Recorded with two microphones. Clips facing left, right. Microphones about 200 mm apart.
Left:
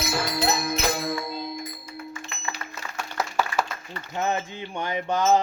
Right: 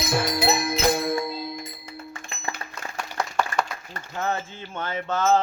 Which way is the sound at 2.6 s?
30° right (ahead or behind).